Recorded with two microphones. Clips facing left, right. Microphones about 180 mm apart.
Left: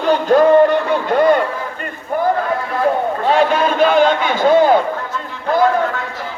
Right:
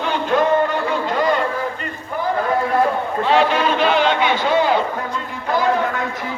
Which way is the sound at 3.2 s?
45° left (ahead or behind).